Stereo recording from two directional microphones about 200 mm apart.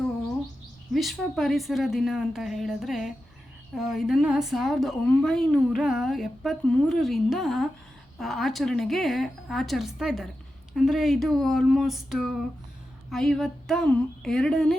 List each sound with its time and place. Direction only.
0.9 s a woman's voice: centre (ahead or behind)